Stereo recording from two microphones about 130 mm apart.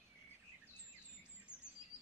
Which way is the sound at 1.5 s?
30° right (ahead or behind).